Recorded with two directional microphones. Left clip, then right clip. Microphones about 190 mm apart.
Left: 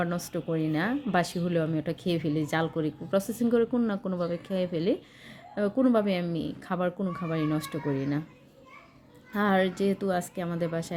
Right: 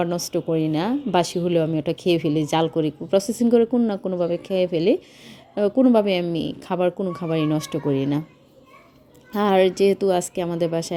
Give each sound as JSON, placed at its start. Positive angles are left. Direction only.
{"t": 0.0, "sound": "speech", "side_deg": -30}
{"t": 9.3, "sound": "a woman's voice", "side_deg": -30}